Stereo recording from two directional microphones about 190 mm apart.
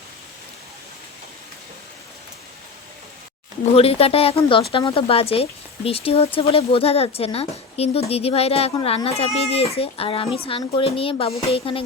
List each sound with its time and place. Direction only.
3.8 s speech: 30° left (ahead or behind)